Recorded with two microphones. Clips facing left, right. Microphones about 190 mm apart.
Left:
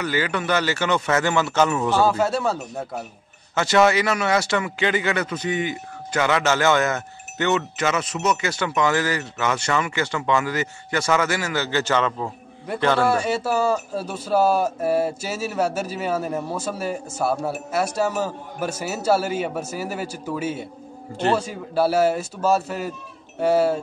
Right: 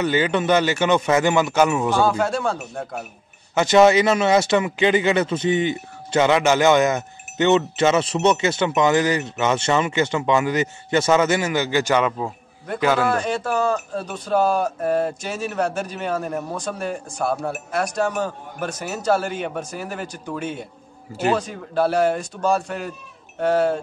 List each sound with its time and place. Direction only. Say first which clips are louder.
0.0 s speech: right 4 dB; 20° right (ahead or behind)
2.0 s a man's voice: left 3 dB; 5° left (ahead or behind)
3.5 s a man's voice: right 4 dB; 20° right (ahead or behind)
13.1 s a man's voice: left 1 dB; 10° left (ahead or behind)